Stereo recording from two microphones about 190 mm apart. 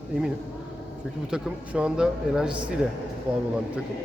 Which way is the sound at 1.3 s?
5° right (ahead or behind).